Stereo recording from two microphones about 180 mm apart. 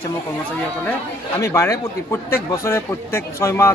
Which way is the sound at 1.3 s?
15° left (ahead or behind).